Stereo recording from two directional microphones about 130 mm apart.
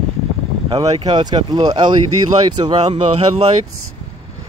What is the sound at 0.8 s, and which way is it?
Speech, 35° right (ahead or behind).